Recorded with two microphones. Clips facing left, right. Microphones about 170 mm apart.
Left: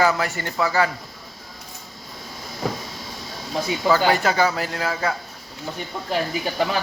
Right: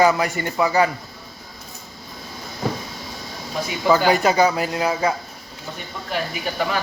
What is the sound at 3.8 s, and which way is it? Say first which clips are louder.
Speech: right 3 dB; 20° right (ahead or behind).